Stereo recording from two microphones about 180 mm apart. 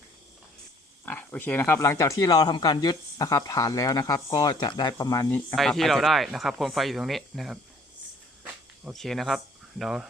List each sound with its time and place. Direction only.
1.0 s speech: 10° left (ahead or behind)
5.5 s speech: centre (ahead or behind)
8.8 s speech: centre (ahead or behind)